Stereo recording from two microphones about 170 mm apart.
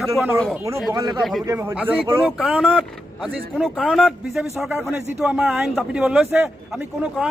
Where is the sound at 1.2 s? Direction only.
Centre (ahead or behind).